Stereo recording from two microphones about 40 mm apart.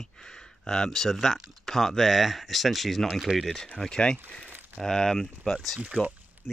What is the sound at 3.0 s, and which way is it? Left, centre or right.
Speech, centre.